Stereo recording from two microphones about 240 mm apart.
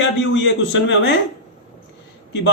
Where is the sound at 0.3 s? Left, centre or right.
Left.